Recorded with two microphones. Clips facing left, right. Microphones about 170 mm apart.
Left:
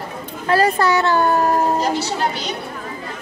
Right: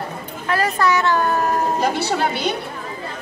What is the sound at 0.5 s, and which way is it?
A child's voice, 30° left (ahead or behind).